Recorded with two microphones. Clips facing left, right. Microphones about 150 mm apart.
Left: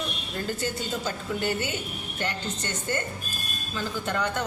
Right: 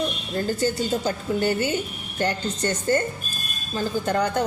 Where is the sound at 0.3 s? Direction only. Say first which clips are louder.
Right 7 dB; 35° right (ahead or behind).